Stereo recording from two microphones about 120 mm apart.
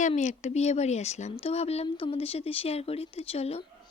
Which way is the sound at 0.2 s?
75° left (ahead or behind).